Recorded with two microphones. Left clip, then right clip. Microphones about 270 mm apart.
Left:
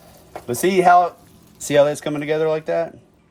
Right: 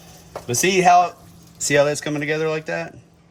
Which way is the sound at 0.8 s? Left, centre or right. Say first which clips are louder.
Left 1 dB; centre.